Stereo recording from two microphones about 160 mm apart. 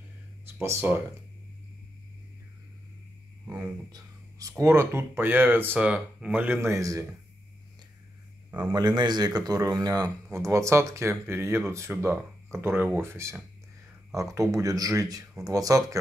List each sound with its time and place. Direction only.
0.6 s speech: 15° right (ahead or behind)
3.4 s speech: 10° right (ahead or behind)
3.9 s speech: 20° right (ahead or behind)
8.5 s a man's voice: 10° right (ahead or behind)
8.7 s speech: 25° right (ahead or behind)